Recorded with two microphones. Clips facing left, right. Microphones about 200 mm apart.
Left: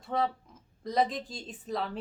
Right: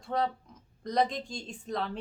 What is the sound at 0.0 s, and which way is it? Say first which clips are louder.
Speech: even; centre (ahead or behind).